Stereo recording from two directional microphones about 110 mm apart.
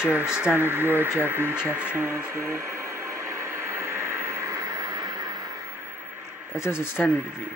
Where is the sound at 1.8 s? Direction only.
15° right (ahead or behind); by 5.5 s 35° right (ahead or behind).